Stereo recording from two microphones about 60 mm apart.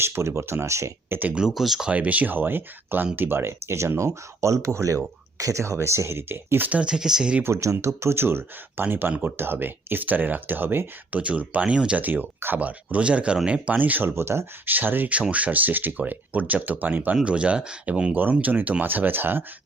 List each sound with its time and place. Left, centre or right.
0.0 s speech: right
1.3 s speech: centre
1.9 s speech: right
6.7 s speech: centre
7.4 s speech: right
11.2 s speech: right
12.0 s speech: right
12.5 s speech: right
14.2 s speech: right
14.7 s speech: right
17.2 s speech: centre
18.1 s speech: right